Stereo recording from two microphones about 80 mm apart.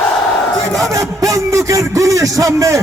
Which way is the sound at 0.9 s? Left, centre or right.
Right.